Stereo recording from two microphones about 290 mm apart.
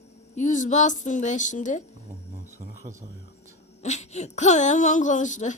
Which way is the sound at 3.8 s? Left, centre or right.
Left.